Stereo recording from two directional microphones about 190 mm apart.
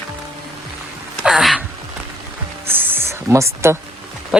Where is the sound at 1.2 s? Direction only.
Centre (ahead or behind).